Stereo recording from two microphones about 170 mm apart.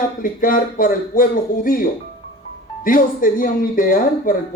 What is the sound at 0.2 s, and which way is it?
A man's voice, 55° left (ahead or behind).